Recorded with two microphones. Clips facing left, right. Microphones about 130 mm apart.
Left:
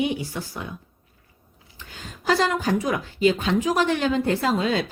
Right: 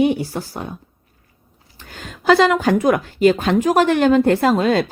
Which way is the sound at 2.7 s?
60° right (ahead or behind).